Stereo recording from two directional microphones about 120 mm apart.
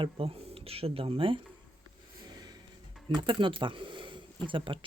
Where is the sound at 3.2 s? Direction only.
45° right (ahead or behind).